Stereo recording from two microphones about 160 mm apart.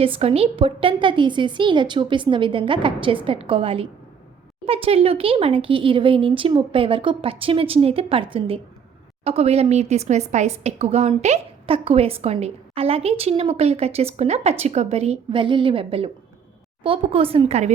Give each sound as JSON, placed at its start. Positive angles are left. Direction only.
{"t": 0.0, "sound": "a woman's voice", "side_deg": -35}